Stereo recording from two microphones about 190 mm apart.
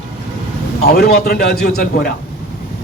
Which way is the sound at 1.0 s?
55° left (ahead or behind).